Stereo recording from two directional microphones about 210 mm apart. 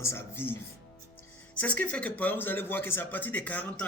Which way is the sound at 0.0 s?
10° left (ahead or behind).